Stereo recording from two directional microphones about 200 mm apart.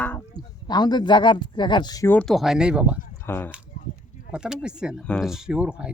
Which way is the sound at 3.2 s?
10° left (ahead or behind).